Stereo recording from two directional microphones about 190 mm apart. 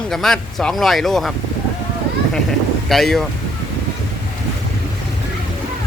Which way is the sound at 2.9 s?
Centre (ahead or behind).